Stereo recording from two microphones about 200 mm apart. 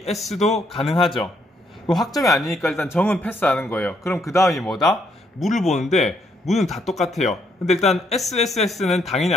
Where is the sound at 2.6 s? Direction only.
10° left (ahead or behind).